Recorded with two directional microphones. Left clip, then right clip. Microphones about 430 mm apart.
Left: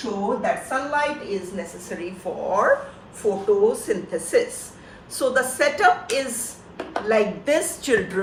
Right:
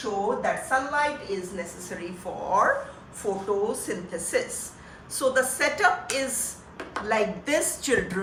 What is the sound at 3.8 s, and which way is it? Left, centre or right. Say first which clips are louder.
A woman's voice: left 7 dB; centre.